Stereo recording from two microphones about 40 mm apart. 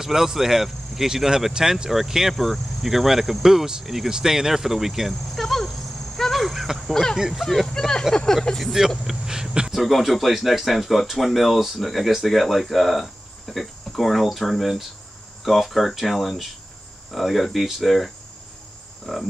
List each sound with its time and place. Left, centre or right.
0.0 s speech: centre
2.3 s cricket: centre
7.2 s speech: centre
7.6 s speech: centre
9.0 s speech: centre
9.8 s cricket: centre